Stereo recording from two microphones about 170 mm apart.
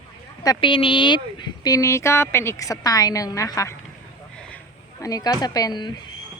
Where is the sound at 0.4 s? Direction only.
30° left (ahead or behind).